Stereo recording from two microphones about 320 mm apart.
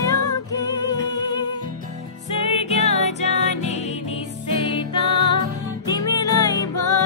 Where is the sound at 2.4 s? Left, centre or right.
Centre.